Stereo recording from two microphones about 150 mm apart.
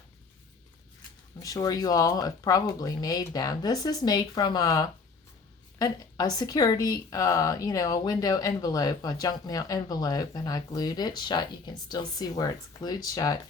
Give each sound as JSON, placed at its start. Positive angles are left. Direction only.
{"t": 1.4, "sound": "speech", "side_deg": 25}